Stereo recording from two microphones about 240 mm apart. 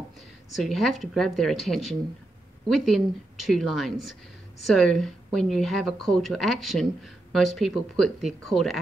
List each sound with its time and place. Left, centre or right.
0.6 s speech: centre